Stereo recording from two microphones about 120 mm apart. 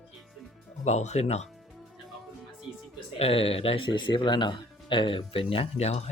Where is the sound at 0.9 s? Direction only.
70° left (ahead or behind).